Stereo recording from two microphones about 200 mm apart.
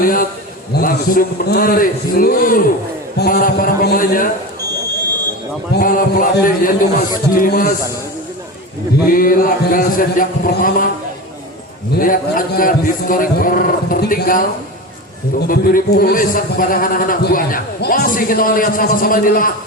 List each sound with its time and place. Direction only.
0.0 s a man's voice: 45° left (ahead or behind)
5.7 s a man's voice: 45° left (ahead or behind)
9.0 s a man's voice: 45° left (ahead or behind)
11.9 s a man's voice: 45° left (ahead or behind)
15.4 s a man's voice: 45° left (ahead or behind)